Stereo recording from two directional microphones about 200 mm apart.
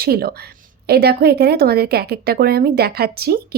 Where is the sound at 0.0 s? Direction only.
50° right (ahead or behind).